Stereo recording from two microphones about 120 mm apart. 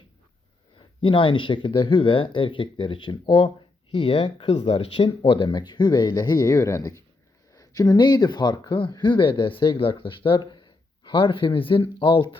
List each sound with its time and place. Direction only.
0.8 s speech: 45° left (ahead or behind)